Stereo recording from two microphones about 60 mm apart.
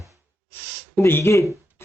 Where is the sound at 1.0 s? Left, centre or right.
Left.